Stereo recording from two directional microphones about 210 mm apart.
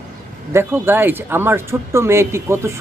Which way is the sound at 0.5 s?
10° right (ahead or behind).